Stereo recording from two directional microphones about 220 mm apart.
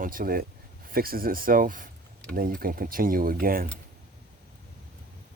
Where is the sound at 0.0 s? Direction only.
40° right (ahead or behind).